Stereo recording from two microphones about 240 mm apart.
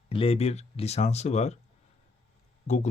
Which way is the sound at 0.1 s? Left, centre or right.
Left.